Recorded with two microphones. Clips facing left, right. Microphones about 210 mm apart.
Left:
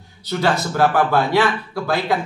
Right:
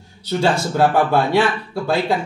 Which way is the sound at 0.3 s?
25° right (ahead or behind).